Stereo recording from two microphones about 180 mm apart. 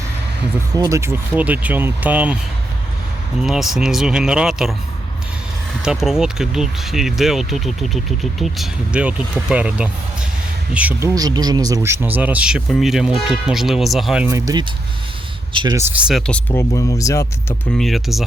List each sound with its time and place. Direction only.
0.8 s speech: 15° right (ahead or behind)
3.4 s speech: centre (ahead or behind)
5.8 s speech: 5° right (ahead or behind)
11.1 s speech: 20° right (ahead or behind); by 14.3 s centre (ahead or behind)
14.3 s speech: 20° right (ahead or behind); by 17.2 s 15° left (ahead or behind)
17.7 s speech: centre (ahead or behind)